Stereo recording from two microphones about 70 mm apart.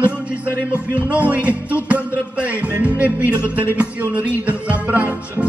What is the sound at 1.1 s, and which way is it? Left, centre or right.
Music, right.